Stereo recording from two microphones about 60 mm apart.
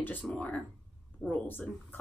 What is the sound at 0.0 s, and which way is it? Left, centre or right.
Speech, left.